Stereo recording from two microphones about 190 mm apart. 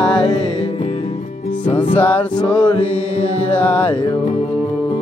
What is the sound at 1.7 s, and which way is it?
Music, 30° left (ahead or behind).